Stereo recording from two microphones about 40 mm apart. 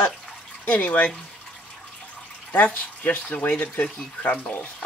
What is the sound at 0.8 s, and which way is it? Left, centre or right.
Speech, left.